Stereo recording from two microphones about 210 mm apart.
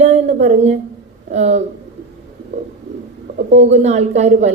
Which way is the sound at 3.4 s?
35° right (ahead or behind).